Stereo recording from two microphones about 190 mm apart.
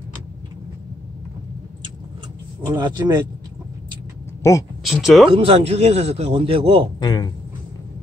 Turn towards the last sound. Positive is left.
turn(degrees=20)  # may be behind; listen again after turning